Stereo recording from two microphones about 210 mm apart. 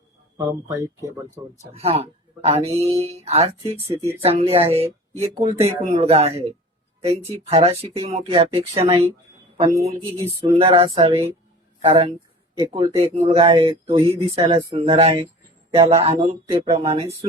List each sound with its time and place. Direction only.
0.3 s speech: 15° right (ahead or behind)
1.7 s speech: 30° right (ahead or behind)